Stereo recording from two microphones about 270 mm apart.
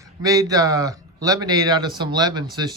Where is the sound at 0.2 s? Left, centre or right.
Centre.